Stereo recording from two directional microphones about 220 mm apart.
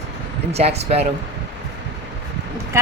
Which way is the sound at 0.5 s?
30° right (ahead or behind).